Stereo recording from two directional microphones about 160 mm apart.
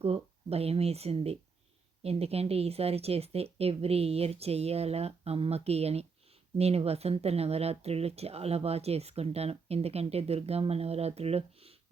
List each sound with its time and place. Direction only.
0.0 s speech: 40° right (ahead or behind)